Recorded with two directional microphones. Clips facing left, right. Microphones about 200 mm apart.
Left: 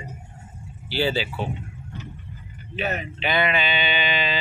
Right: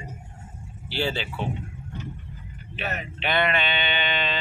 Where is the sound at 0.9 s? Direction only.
5° left (ahead or behind).